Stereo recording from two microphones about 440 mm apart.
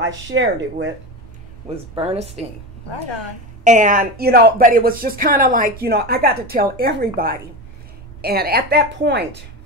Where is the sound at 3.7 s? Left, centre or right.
Centre.